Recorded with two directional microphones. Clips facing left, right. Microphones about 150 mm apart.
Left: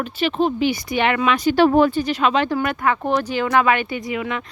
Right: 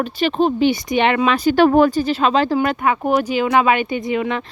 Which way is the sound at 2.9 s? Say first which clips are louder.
Even; 10° right (ahead or behind).